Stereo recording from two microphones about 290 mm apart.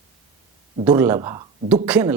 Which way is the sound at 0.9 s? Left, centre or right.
Centre.